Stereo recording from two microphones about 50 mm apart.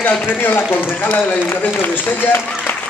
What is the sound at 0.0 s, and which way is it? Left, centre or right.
Speech, left.